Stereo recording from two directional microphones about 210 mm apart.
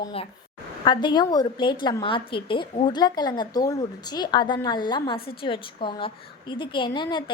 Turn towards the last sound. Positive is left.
turn(degrees=20)  # may be behind; listen again after turning